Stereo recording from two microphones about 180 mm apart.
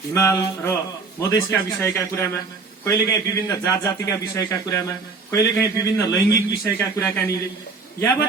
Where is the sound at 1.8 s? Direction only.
10° left (ahead or behind).